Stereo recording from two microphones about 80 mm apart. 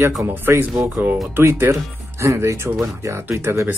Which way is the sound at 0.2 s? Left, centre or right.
Right.